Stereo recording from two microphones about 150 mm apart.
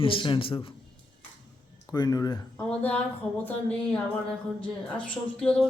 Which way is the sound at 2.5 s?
10° left (ahead or behind).